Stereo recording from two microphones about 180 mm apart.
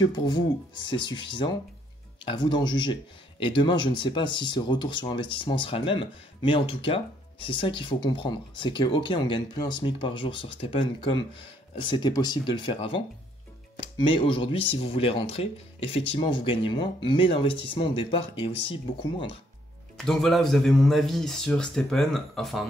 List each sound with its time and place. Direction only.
0.0 s speech: 25° left (ahead or behind)
20.0 s speech: centre (ahead or behind)